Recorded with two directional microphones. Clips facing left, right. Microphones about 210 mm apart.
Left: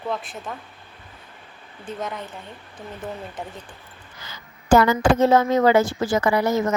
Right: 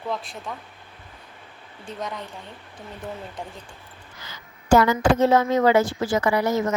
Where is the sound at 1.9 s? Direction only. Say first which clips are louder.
Left 2 dB; centre (ahead or behind).